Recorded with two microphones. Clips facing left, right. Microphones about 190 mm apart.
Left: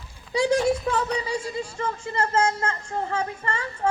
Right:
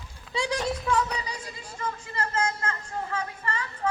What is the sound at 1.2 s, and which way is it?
Speech, 30° left (ahead or behind).